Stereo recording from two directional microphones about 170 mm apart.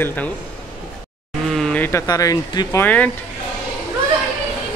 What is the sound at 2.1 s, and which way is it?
Speech, 20° left (ahead or behind).